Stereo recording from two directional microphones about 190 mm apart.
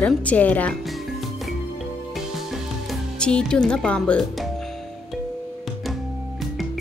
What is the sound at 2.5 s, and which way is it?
Music, centre (ahead or behind).